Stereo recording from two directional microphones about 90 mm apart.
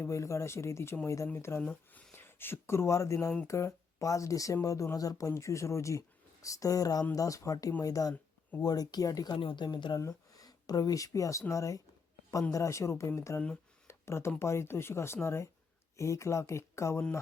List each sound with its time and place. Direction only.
0.0 s speech: 35° left (ahead or behind)
1.6 s speech: 15° left (ahead or behind); by 9.4 s 40° left (ahead or behind)
9.4 s speech: 65° left (ahead or behind)
10.0 s speech: 40° left (ahead or behind)